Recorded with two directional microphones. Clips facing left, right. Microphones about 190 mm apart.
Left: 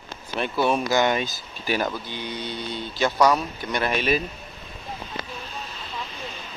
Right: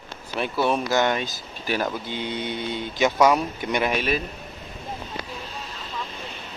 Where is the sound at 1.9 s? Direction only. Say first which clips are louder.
Right 3 dB; 20° right (ahead or behind).